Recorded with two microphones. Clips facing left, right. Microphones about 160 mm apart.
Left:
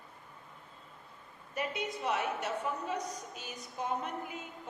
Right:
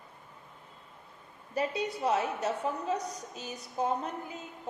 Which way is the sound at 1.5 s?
35° right (ahead or behind).